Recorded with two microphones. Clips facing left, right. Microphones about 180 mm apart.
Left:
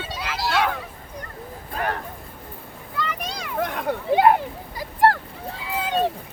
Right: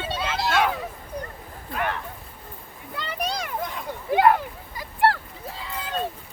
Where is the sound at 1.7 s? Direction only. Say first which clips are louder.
Left 1 dB; 40° left (ahead or behind).